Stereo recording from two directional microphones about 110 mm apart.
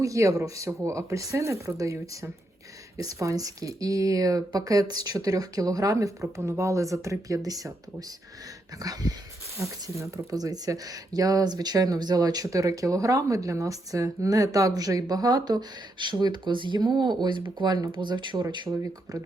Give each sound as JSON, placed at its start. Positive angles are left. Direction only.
{"t": 0.0, "sound": "speech", "side_deg": -30}